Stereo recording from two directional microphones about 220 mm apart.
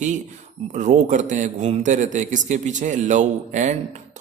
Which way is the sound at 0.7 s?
35° right (ahead or behind).